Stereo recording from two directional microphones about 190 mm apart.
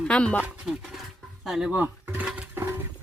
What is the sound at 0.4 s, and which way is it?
Speech, 5° right (ahead or behind).